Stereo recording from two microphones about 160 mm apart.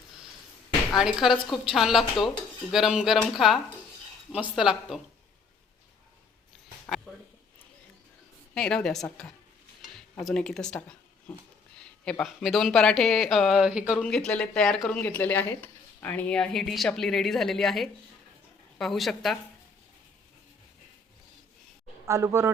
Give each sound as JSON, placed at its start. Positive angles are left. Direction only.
{"t": 0.9, "sound": "speech", "side_deg": 0}
{"t": 6.8, "sound": "a sound", "side_deg": 5}
{"t": 8.5, "sound": "speech", "side_deg": 5}
{"t": 14.0, "sound": "speech", "side_deg": 5}
{"t": 22.0, "sound": "speech", "side_deg": -15}